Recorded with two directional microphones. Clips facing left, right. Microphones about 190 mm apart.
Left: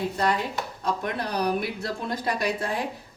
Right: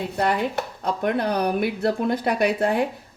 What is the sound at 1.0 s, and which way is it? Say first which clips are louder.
Speech: right 7 dB; 60° right (ahead or behind).